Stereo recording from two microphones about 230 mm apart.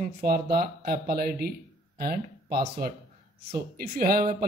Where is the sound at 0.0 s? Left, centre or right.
Right.